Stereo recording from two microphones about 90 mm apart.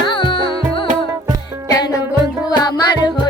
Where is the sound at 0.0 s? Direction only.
65° left (ahead or behind).